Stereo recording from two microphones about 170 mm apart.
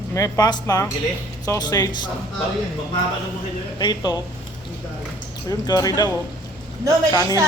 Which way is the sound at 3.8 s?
25° left (ahead or behind).